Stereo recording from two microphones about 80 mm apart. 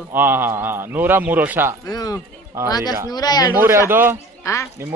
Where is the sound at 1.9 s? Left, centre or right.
Left.